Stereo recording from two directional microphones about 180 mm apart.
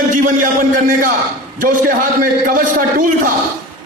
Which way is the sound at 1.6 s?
50° right (ahead or behind).